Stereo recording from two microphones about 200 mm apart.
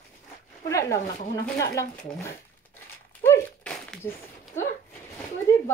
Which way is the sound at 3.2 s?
5° left (ahead or behind).